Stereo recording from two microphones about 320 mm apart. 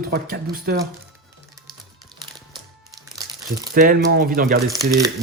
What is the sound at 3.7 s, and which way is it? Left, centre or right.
Speech, right.